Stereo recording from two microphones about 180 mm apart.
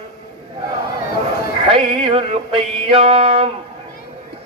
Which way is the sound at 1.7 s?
30° right (ahead or behind).